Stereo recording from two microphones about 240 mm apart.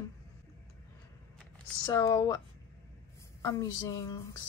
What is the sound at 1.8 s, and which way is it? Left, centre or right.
Speech, centre.